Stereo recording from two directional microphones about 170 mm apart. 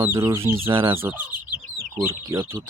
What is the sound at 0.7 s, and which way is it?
Speech, 30° right (ahead or behind).